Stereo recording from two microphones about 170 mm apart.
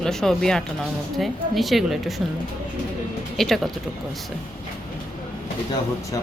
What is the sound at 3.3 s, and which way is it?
Speech, centre (ahead or behind).